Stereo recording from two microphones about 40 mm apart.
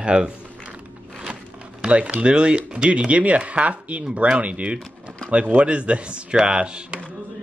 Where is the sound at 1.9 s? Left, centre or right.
Right.